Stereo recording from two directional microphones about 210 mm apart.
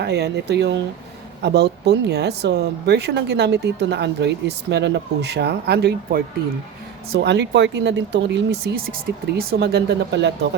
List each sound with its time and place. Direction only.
0.0 s speech: 50° right (ahead or behind)